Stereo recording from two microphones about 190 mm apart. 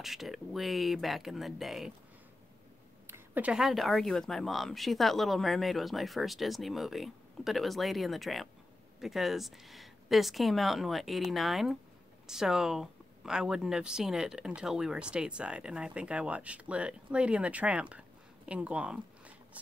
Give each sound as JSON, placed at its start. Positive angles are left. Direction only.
{"t": 0.0, "sound": "speech", "side_deg": 0}
{"t": 3.1, "sound": "speech", "side_deg": -10}